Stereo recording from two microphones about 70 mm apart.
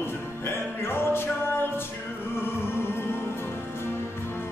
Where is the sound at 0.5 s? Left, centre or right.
Left.